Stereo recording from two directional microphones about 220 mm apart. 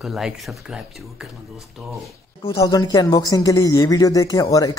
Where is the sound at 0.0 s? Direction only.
5° right (ahead or behind).